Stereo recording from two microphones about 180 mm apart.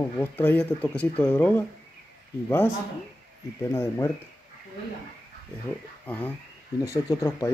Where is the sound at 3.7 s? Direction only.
15° left (ahead or behind).